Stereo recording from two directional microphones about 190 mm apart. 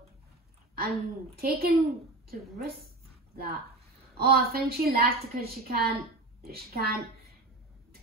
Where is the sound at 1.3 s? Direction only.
55° right (ahead or behind).